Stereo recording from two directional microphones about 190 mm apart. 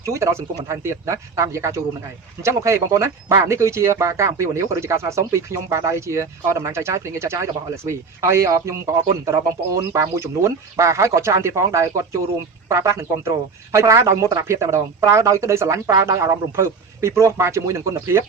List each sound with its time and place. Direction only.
0.0 s speech: 15° right (ahead or behind)